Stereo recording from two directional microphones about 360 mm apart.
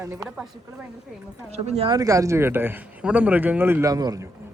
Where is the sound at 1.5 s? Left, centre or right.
Centre.